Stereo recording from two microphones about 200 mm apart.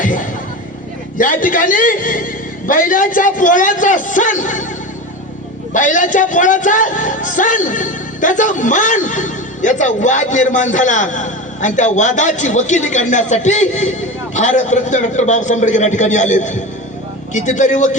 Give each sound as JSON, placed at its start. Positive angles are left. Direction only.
{"t": 1.2, "sound": "a man's voice", "side_deg": 40}
{"t": 5.7, "sound": "a man's voice", "side_deg": 40}